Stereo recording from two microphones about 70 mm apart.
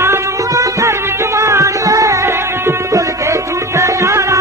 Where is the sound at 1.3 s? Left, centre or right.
Right.